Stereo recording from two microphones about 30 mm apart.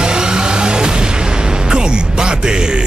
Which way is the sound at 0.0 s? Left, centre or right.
Right.